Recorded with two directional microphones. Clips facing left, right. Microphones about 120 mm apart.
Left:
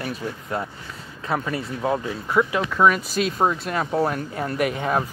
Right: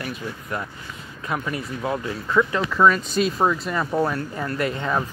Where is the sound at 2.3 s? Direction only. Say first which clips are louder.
Even; 15° left (ahead or behind).